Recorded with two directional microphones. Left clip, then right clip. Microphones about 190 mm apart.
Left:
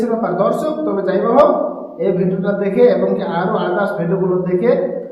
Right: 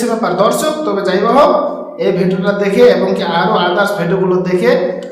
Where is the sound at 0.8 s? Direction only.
10° right (ahead or behind).